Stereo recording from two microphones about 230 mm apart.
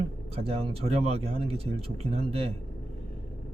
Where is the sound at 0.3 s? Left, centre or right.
Right.